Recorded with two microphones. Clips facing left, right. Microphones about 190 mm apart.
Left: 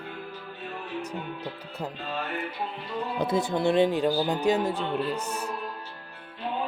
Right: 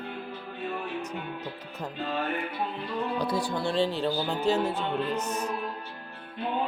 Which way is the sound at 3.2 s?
20° left (ahead or behind).